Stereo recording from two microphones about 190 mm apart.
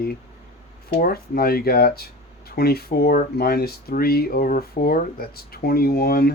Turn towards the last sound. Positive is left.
turn(degrees=55)  # may be behind; listen again after turning